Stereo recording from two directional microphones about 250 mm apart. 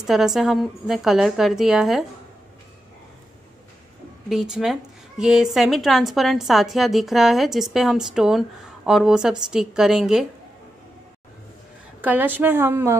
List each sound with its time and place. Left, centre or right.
0.0 s a woman's voice: centre
4.3 s a woman's voice: centre
12.0 s a woman's voice: centre